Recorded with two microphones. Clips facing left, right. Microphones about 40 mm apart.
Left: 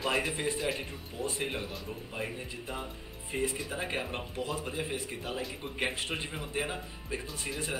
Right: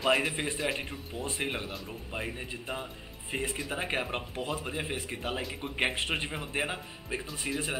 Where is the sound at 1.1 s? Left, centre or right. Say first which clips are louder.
Even; right.